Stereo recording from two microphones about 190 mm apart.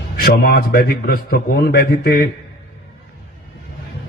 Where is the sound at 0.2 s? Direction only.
55° left (ahead or behind).